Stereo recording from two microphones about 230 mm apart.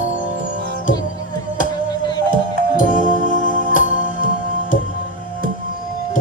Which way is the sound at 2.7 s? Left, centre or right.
Left.